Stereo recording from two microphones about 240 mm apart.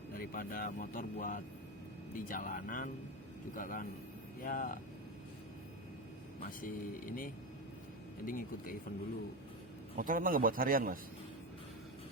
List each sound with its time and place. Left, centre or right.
0.1 s speech: left
6.6 s speech: left
10.0 s a man's voice: right